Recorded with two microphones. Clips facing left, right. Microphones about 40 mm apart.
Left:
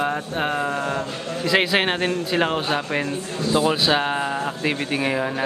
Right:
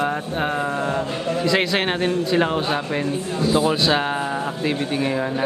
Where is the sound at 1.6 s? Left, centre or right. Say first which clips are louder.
Even; centre.